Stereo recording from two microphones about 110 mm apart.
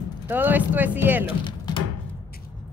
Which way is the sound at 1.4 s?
40° left (ahead or behind).